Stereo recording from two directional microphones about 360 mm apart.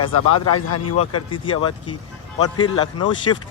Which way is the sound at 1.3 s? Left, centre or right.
Centre.